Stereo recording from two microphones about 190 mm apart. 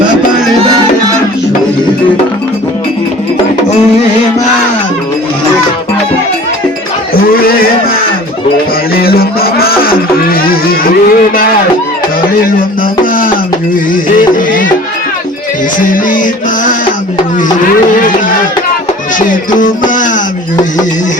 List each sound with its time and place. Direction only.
7.1 s a sound: 50° left (ahead or behind)
9.0 s music: 50° left (ahead or behind)
10.4 s a sound: 50° left (ahead or behind)
13.9 s music: 45° left (ahead or behind)
15.9 s music: 45° left (ahead or behind)
19.5 s music: 45° left (ahead or behind)